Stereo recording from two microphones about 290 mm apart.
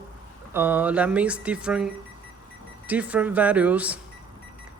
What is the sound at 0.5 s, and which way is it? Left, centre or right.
Speech, centre.